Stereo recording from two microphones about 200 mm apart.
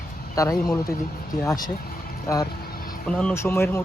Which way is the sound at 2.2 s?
15° left (ahead or behind).